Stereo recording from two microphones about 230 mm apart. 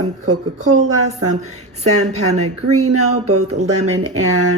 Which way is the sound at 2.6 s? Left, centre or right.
Right.